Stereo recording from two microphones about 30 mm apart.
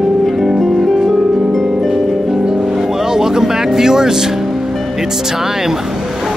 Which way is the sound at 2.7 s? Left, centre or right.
Centre.